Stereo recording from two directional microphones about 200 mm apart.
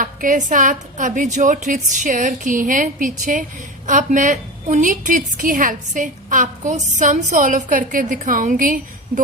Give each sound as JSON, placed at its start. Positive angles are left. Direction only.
{"t": 0.0, "sound": "a woman's voice", "side_deg": -40}